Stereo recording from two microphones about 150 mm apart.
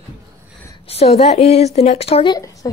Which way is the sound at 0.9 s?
45° left (ahead or behind).